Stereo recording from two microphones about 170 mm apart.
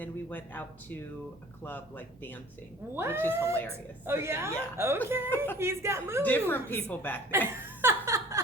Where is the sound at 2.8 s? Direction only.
15° right (ahead or behind).